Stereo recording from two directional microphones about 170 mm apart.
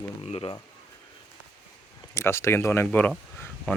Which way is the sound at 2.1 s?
15° left (ahead or behind).